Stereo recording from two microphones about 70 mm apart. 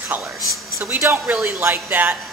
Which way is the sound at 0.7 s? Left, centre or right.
Right.